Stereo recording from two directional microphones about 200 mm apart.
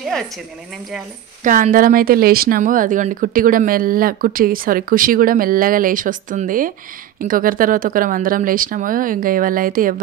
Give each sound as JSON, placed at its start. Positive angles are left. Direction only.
{"t": 1.4, "sound": "speech", "side_deg": -40}